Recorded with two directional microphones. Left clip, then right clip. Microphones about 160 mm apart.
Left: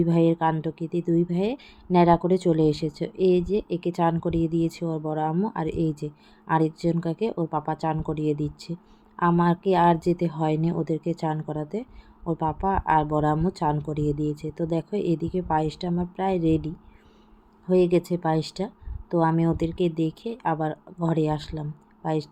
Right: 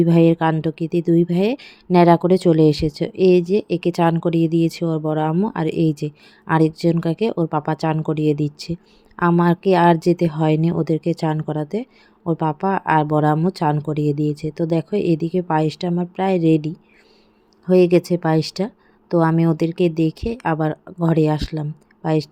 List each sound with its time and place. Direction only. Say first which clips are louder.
0.0 s speech: right 6 dB; 45° right (ahead or behind)